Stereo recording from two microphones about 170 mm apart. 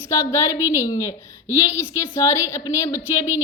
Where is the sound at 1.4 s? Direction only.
10° right (ahead or behind).